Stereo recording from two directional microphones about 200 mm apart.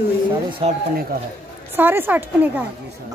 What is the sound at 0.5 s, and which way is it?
Speech, 25° right (ahead or behind).